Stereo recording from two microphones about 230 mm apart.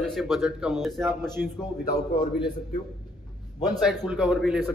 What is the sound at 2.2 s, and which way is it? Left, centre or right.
Speech, centre.